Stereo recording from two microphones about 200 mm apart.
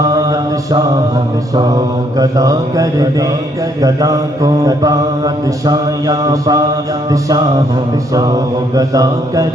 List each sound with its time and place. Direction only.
0.1 s mantra: 15° right (ahead or behind)
2.1 s mantra: 15° right (ahead or behind)
8.7 s mantra: 15° right (ahead or behind)